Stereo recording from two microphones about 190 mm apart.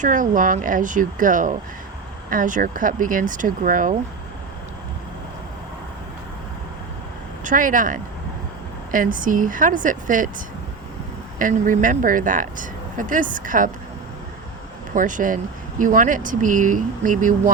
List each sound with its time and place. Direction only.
0.0 s speech: 45° right (ahead or behind)
7.4 s speech: 45° right (ahead or behind)
11.3 s speech: 45° right (ahead or behind)
14.9 s speech: 45° right (ahead or behind)